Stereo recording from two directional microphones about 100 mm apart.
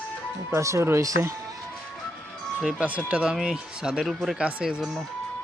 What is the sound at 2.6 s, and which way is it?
Speech, 10° right (ahead or behind).